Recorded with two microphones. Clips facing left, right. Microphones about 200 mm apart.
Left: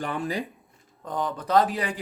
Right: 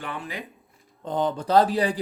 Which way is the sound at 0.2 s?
35° left (ahead or behind).